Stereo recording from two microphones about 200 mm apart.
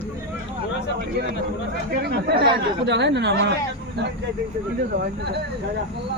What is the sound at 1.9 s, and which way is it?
A man's voice, 50° right (ahead or behind).